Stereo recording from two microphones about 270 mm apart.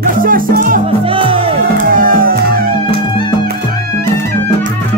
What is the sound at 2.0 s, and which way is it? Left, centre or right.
Music, right.